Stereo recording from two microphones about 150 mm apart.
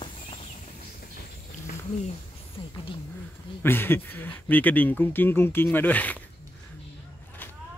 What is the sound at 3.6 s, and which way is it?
Speech, 15° left (ahead or behind).